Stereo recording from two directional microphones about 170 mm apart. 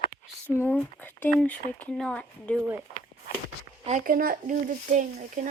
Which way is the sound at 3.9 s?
55° right (ahead or behind).